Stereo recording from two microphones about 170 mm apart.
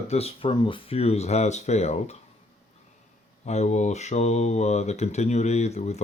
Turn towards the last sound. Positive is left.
turn(degrees=40)  # may be behind; listen again after turning